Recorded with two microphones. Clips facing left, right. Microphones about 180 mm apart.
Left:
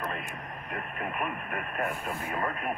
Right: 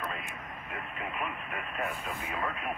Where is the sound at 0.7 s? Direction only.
50° left (ahead or behind).